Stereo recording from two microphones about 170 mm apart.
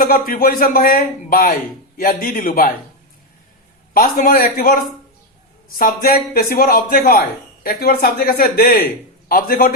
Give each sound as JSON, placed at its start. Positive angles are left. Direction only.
{"t": 0.0, "sound": "a man's voice", "side_deg": 60}
{"t": 3.9, "sound": "a man's voice", "side_deg": 55}